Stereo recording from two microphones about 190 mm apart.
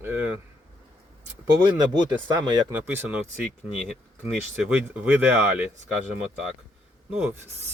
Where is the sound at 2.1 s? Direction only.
20° right (ahead or behind).